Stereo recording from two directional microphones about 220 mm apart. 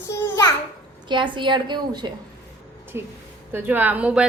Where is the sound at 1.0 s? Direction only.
20° right (ahead or behind).